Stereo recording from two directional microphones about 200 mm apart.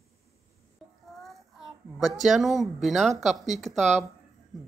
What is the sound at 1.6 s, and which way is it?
A woman's voice, centre (ahead or behind).